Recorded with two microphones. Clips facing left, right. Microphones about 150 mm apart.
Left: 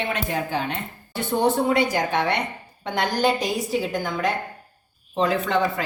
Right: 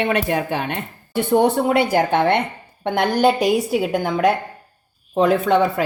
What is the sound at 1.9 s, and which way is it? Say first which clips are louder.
A woman's voice: right 6 dB; 60° right (ahead or behind).